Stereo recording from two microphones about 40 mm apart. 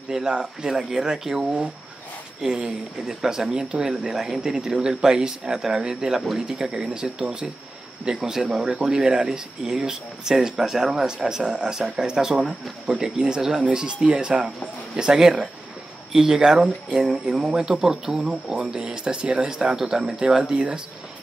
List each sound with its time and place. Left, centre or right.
0.1 s speech: centre
0.7 s speech: centre
20.5 s speech: right